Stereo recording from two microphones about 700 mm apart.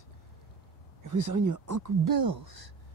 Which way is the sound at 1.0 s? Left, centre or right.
Right.